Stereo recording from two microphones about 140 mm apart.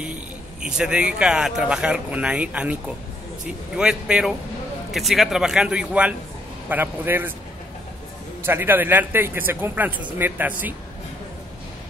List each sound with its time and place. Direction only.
0.0 s speech: 5° right (ahead or behind)
8.5 s speech: 15° right (ahead or behind)